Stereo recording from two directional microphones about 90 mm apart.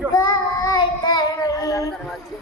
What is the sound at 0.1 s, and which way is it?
Child singing, 40° left (ahead or behind).